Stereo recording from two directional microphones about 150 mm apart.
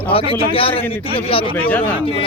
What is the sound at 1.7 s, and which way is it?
Speech, 10° left (ahead or behind).